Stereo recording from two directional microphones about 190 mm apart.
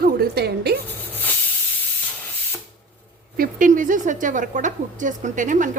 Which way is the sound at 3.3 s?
45° right (ahead or behind).